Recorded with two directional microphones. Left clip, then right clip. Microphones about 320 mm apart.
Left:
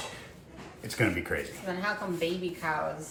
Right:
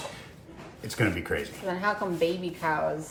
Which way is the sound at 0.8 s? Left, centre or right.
Centre.